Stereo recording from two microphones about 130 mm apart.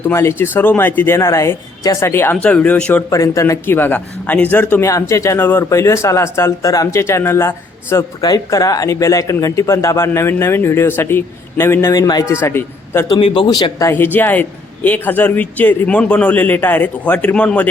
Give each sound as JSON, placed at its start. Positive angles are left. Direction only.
{"t": 0.1, "sound": "speech", "side_deg": 20}
{"t": 2.3, "sound": "a man's voice", "side_deg": 10}
{"t": 3.1, "sound": "a man's voice", "side_deg": 25}
{"t": 4.9, "sound": "speech", "side_deg": 25}
{"t": 13.1, "sound": "speech", "side_deg": 45}
{"t": 13.5, "sound": "a man's voice", "side_deg": 30}